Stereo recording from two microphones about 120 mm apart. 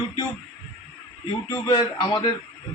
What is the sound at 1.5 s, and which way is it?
Speech, 40° left (ahead or behind).